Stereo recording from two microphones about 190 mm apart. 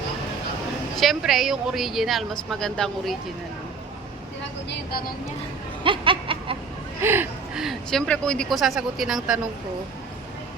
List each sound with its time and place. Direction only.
0.9 s a woman's voice: centre (ahead or behind)
4.7 s vehicle: 55° left (ahead or behind)
5.8 s a sound: 25° right (ahead or behind)
7.0 s a woman's voice: 10° right (ahead or behind)